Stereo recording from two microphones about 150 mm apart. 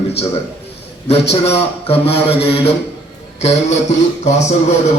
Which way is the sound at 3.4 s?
50° left (ahead or behind).